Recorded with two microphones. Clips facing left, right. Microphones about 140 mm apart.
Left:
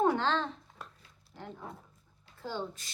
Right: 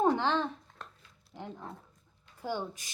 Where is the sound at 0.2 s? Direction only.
15° right (ahead or behind).